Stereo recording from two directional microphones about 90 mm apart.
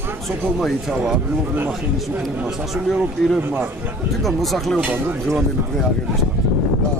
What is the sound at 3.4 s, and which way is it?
Speech, 20° right (ahead or behind).